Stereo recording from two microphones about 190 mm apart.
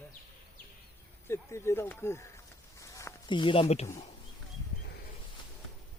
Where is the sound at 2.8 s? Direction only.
15° left (ahead or behind); by 3.8 s 30° left (ahead or behind).